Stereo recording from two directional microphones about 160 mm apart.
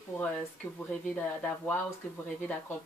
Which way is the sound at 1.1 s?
5° left (ahead or behind).